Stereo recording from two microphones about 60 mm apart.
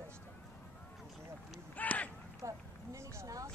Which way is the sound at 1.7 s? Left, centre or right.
Left.